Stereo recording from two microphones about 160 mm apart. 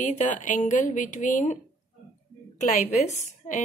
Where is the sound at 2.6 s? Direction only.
50° left (ahead or behind).